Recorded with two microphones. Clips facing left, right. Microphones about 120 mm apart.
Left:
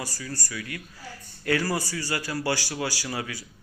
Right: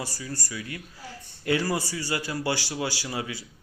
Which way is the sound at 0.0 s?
20° right (ahead or behind).